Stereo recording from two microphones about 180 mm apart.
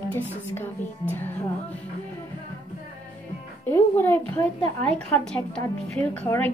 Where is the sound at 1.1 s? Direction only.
10° left (ahead or behind).